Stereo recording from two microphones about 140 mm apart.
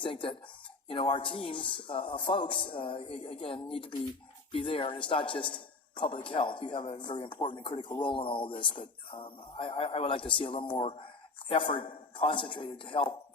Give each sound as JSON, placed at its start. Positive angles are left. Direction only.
{"t": 0.0, "sound": "speech", "side_deg": 35}